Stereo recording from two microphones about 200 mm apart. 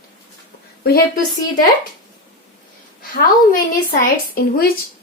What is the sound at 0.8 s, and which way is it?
Speech, 50° left (ahead or behind).